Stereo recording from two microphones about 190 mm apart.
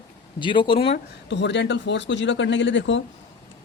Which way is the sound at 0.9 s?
70° left (ahead or behind).